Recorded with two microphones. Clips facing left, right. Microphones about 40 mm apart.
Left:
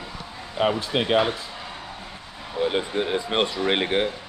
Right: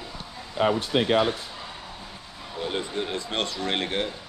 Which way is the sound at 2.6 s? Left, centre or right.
Left.